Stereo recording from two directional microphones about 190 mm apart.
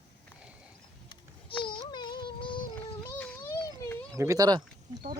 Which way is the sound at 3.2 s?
10° left (ahead or behind).